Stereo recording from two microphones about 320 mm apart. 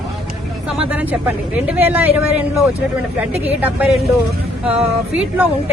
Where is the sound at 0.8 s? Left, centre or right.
Centre.